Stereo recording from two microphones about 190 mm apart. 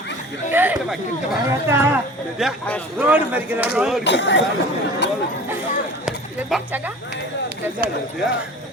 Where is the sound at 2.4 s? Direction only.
5° left (ahead or behind).